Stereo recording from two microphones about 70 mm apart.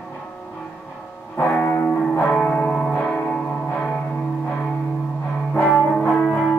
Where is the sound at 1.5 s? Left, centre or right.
Left.